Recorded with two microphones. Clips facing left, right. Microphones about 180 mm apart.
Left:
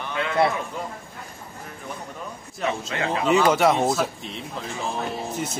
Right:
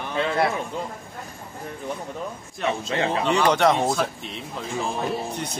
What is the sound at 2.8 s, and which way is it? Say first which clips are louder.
Speech: right 2 dB; 35° right (ahead or behind).